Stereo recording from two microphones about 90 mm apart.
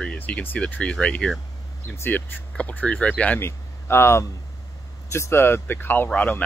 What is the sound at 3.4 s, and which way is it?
Speech, 30° left (ahead or behind).